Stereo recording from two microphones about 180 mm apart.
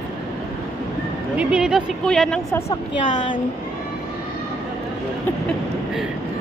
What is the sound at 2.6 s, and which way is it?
Speech, 45° left (ahead or behind).